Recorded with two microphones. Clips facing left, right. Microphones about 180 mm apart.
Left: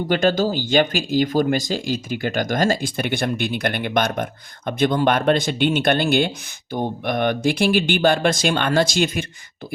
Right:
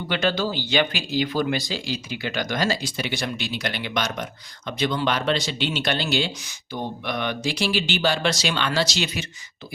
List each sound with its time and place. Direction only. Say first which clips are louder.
0.1 s speech: left 5 dB; 45° left (ahead or behind)